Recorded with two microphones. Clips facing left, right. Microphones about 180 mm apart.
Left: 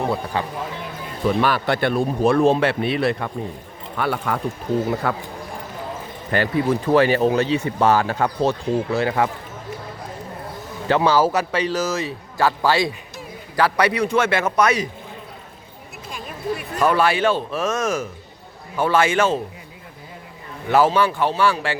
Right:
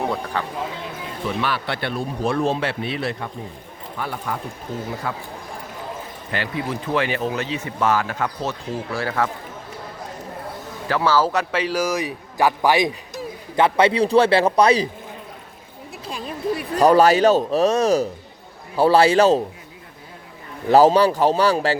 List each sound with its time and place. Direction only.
0.4 s speech: 15° left (ahead or behind)
1.4 s speech: 45° left (ahead or behind); by 3.2 s 60° left (ahead or behind)
3.9 s speech: 75° left (ahead or behind)
5.0 s speech: 65° left (ahead or behind)
6.3 s speech: 45° left (ahead or behind); by 9.3 s 15° left (ahead or behind)
10.8 s speech: 20° left (ahead or behind)
11.3 s speech: centre (ahead or behind); by 14.8 s 30° right (ahead or behind)
16.0 s speech: 35° right (ahead or behind)
20.7 s speech: 35° right (ahead or behind)